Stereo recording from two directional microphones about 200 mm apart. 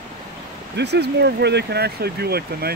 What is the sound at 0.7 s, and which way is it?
Speech, 55° right (ahead or behind).